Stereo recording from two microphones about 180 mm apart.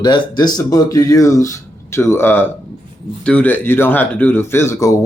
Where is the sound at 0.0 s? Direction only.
25° left (ahead or behind).